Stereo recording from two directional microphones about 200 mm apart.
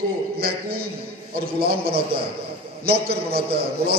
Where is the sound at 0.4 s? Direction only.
50° right (ahead or behind).